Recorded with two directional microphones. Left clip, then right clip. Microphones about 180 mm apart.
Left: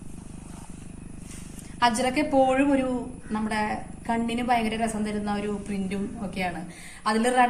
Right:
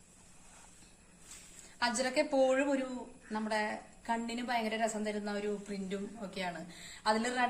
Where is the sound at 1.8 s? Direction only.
35° right (ahead or behind).